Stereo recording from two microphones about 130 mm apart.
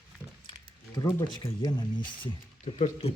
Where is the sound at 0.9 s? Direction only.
35° left (ahead or behind).